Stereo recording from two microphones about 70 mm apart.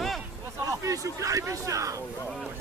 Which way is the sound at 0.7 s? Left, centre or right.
Right.